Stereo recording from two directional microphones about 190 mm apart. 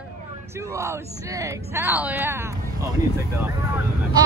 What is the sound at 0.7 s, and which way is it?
Speech, 15° right (ahead or behind).